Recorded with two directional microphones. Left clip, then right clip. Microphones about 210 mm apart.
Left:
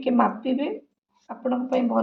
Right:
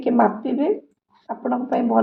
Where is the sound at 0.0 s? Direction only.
20° right (ahead or behind).